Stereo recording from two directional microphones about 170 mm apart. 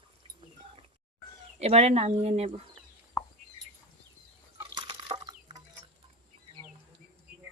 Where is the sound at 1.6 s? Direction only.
40° right (ahead or behind).